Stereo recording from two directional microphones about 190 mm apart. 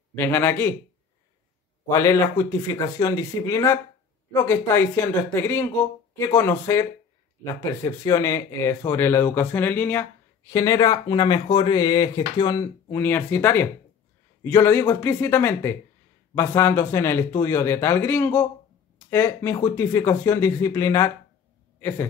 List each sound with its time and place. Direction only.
0.1 s speech: 10° left (ahead or behind)
1.9 s speech: 15° left (ahead or behind)